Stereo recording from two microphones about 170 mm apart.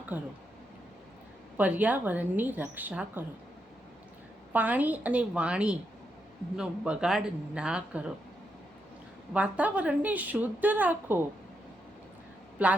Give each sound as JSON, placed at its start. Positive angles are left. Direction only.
{"t": 1.5, "sound": "a woman's voice", "side_deg": -10}
{"t": 4.5, "sound": "a woman's voice", "side_deg": -10}
{"t": 9.3, "sound": "a woman's voice", "side_deg": -10}
{"t": 12.6, "sound": "a woman's voice", "side_deg": -10}